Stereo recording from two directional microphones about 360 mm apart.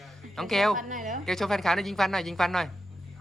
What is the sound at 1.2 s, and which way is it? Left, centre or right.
A child's voice, centre.